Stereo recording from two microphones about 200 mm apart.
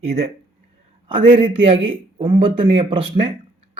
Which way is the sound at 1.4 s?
25° right (ahead or behind).